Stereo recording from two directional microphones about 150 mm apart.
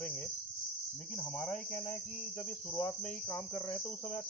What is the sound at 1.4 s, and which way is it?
Cricket, 10° left (ahead or behind).